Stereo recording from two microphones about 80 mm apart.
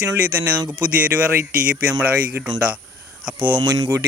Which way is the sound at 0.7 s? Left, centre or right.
Right.